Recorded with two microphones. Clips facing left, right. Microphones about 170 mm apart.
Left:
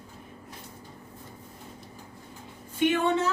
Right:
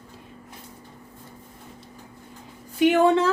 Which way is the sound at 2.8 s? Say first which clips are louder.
Right 7 dB; 90° right.